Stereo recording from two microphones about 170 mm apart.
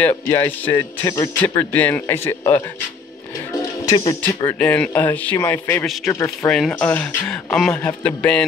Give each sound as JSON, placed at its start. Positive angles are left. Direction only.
{"t": 0.3, "sound": "a man's voice", "side_deg": 15}
{"t": 3.9, "sound": "speech", "side_deg": 25}
{"t": 4.5, "sound": "a man's voice", "side_deg": 10}